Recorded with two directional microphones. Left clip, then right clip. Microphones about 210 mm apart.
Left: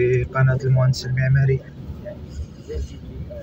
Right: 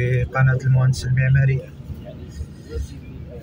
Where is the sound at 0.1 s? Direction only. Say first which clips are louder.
Left 1 dB; 30° right (ahead or behind).